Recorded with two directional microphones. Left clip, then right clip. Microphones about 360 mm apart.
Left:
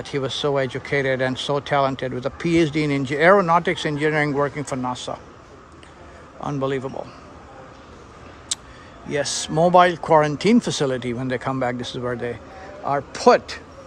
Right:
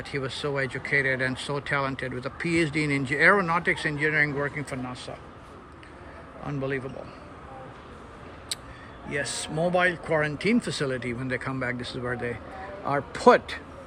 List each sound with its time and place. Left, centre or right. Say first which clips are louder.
0.0 s speech: left 7 dB; centre
6.4 s speech: left 7 dB; centre
9.0 s speech: left 6 dB; centre